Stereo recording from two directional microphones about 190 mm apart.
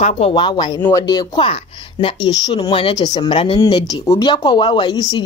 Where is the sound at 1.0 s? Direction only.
25° left (ahead or behind).